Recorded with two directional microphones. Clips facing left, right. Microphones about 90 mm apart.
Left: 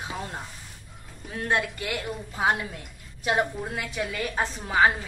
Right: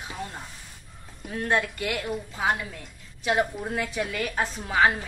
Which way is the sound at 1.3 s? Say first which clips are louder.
Right 1 dB; 10° left (ahead or behind).